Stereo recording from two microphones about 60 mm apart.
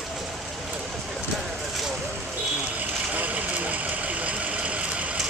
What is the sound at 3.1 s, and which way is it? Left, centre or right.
Vehicle, right.